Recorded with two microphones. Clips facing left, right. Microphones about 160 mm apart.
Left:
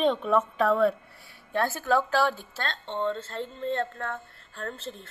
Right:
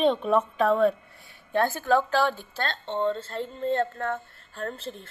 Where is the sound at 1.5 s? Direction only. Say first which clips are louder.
Right 3 dB; centre (ahead or behind).